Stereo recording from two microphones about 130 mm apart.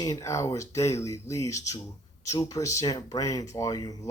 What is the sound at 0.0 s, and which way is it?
Speech, 25° left (ahead or behind).